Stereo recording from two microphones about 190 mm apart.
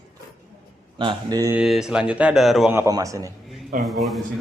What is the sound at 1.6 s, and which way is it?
Speech, 5° right (ahead or behind).